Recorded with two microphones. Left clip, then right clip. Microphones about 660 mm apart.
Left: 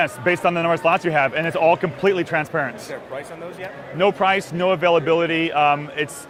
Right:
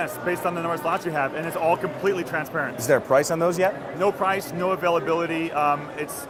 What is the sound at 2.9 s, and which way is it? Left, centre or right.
Speech, right.